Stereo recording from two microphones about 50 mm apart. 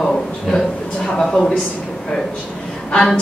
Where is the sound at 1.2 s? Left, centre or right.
Centre.